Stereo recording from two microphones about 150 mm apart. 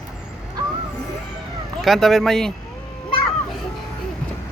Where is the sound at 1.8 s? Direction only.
Centre (ahead or behind).